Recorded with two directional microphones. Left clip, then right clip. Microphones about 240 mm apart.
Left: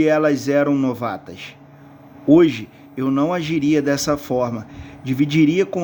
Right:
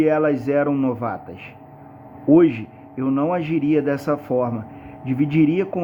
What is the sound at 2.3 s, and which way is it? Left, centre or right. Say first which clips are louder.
A man's voice: left 1 dB; left.